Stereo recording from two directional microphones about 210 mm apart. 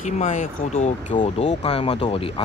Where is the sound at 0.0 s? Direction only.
35° left (ahead or behind).